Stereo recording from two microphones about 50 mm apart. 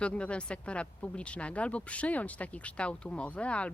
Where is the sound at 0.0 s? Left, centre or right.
Left.